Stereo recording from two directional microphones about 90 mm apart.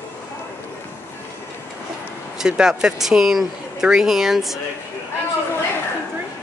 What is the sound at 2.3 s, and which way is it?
Speech, 5° right (ahead or behind).